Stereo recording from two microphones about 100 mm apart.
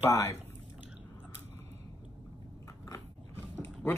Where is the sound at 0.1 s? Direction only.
30° left (ahead or behind).